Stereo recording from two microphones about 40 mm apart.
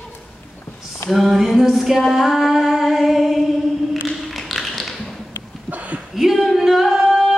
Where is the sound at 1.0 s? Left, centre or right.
Centre.